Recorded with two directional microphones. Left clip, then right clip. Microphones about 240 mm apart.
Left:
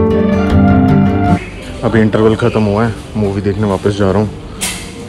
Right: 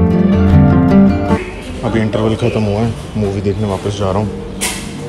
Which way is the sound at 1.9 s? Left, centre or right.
Centre.